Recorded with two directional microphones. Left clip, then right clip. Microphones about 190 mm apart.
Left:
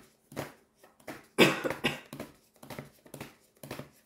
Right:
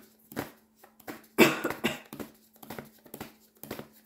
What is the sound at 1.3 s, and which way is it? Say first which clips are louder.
Cough: right 1 dB; 30° right (ahead or behind).